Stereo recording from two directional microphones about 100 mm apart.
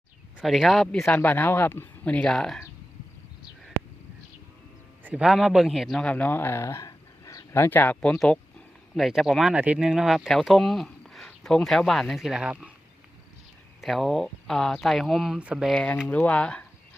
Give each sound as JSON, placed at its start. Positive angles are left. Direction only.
{"t": 0.4, "sound": "speech", "side_deg": 0}
{"t": 1.2, "sound": "speech", "side_deg": 15}
{"t": 5.0, "sound": "speech", "side_deg": -10}
{"t": 6.0, "sound": "speech", "side_deg": 15}
{"t": 8.2, "sound": "a sound", "side_deg": 10}
{"t": 9.0, "sound": "speech", "side_deg": -5}
{"t": 13.8, "sound": "speech", "side_deg": 0}
{"t": 15.7, "sound": "speech", "side_deg": 10}